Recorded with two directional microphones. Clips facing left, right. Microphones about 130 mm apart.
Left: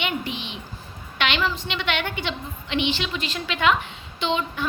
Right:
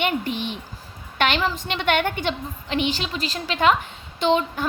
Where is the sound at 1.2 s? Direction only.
45° right (ahead or behind).